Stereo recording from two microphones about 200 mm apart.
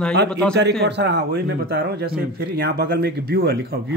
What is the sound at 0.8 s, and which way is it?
Speech, 55° right (ahead or behind).